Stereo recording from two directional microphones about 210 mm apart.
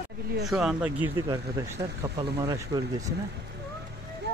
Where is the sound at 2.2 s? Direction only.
20° right (ahead or behind).